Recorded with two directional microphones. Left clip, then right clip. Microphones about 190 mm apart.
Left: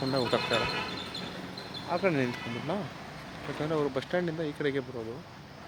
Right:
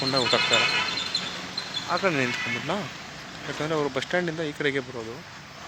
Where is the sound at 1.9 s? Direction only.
Centre (ahead or behind).